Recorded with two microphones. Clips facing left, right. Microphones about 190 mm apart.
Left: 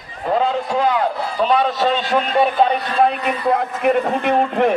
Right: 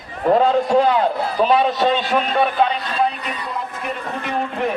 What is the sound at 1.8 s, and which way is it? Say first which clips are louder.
Speech: even; 10° right (ahead or behind).